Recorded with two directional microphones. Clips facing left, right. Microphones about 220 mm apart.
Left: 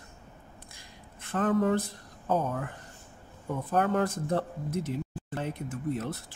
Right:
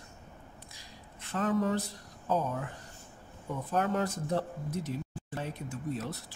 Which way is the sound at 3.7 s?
55° left (ahead or behind).